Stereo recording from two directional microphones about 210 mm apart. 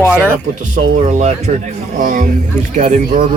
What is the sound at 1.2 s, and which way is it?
Speech, 35° right (ahead or behind).